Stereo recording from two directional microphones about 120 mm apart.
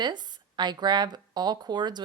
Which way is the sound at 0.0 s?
35° right (ahead or behind).